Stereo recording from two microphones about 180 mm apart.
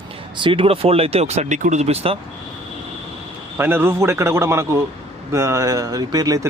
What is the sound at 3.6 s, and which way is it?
Speech, 10° right (ahead or behind).